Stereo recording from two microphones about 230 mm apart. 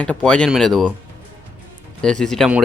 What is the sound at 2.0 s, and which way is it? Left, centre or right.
Speech, centre.